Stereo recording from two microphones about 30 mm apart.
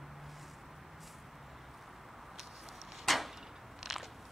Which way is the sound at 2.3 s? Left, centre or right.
Centre.